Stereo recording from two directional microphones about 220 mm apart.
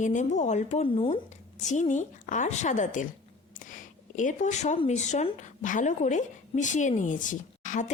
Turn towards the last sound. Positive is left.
turn(degrees=35)  # may be behind; listen again after turning